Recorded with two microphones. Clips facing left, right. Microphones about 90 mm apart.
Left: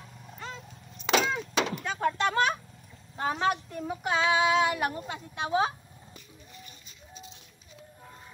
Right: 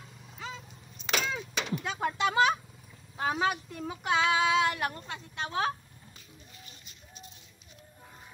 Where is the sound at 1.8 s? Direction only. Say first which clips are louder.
Right 2 dB; 10° right (ahead or behind).